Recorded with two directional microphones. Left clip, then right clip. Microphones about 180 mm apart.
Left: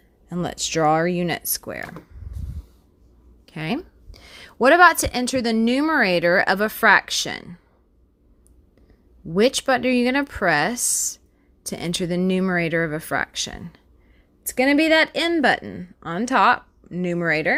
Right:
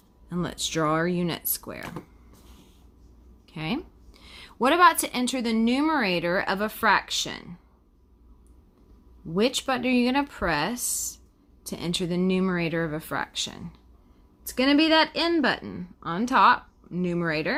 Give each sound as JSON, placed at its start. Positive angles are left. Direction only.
{"t": 0.3, "sound": "speech", "side_deg": 25}
{"t": 3.4, "sound": "a woman's voice", "side_deg": 35}
{"t": 9.3, "sound": "speech", "side_deg": 35}